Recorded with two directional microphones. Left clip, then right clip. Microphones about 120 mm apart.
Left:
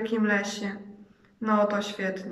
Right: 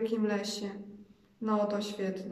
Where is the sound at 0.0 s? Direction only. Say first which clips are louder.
Left 5 dB; 35° right (ahead or behind).